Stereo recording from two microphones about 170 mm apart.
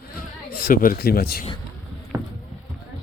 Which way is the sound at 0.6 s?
55° left (ahead or behind).